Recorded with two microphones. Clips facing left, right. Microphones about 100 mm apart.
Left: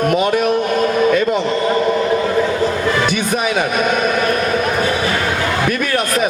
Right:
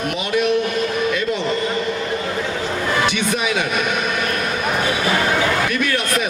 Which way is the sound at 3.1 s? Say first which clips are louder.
Left 3 dB; 45° left (ahead or behind).